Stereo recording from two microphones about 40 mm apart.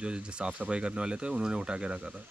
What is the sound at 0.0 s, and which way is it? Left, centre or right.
Speech, right.